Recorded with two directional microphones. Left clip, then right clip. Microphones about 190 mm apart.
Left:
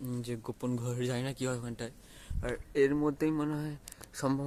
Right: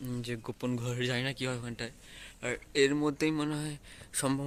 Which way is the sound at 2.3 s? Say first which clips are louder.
Right 1 dB; centre (ahead or behind).